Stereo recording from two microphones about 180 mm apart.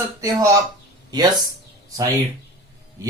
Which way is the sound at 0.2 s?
20° right (ahead or behind).